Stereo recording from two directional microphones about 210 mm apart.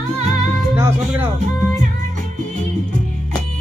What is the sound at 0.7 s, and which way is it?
Speech, 10° right (ahead or behind).